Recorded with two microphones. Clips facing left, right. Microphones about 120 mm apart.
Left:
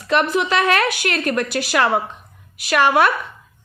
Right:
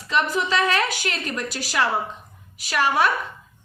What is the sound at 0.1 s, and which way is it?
A woman's voice, 65° left (ahead or behind).